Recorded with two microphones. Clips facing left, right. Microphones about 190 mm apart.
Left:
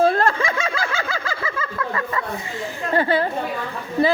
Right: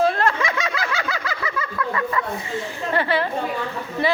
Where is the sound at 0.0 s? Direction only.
35° left (ahead or behind).